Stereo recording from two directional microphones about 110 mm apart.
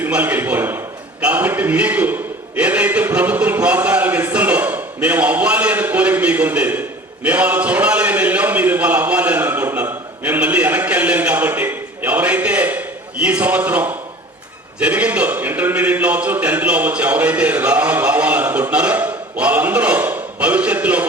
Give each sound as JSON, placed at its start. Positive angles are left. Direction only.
{"t": 0.0, "sound": "a man's voice", "side_deg": -15}